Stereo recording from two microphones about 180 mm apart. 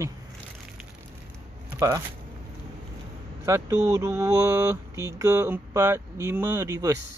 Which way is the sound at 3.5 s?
20° right (ahead or behind).